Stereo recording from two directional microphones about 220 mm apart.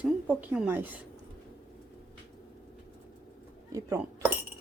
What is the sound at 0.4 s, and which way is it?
Speech, 5° right (ahead or behind).